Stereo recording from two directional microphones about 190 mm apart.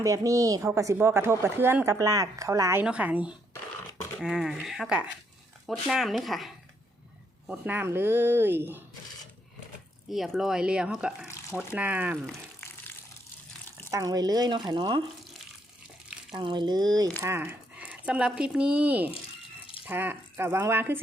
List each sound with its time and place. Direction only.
0.0 s speech: 15° right (ahead or behind)
10.1 s speech: centre (ahead or behind)
13.9 s speech: 20° right (ahead or behind)
16.3 s speech: 25° right (ahead or behind)